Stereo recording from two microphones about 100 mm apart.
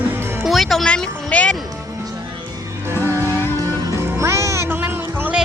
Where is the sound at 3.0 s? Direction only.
30° right (ahead or behind).